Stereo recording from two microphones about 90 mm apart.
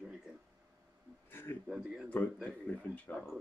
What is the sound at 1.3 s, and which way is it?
Speech, 25° left (ahead or behind).